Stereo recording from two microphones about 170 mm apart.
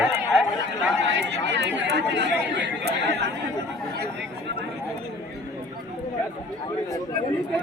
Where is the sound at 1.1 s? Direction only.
90° right.